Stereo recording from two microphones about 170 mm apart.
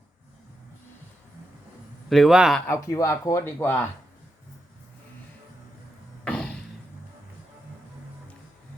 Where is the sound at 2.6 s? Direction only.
15° left (ahead or behind).